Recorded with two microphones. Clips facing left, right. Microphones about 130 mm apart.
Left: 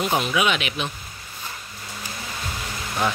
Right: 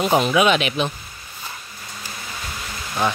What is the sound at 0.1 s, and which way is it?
Speech, 35° right (ahead or behind).